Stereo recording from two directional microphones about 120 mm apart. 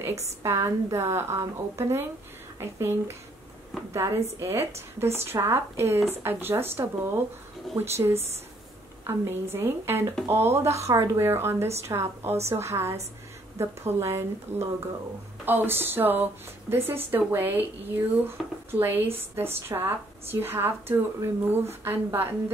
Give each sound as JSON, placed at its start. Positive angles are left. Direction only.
{"t": 0.4, "sound": "speech", "side_deg": -25}
{"t": 14.5, "sound": "speech", "side_deg": -70}
{"t": 15.4, "sound": "speech", "side_deg": -15}